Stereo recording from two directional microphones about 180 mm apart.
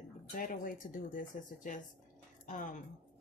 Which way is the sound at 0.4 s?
50° left (ahead or behind).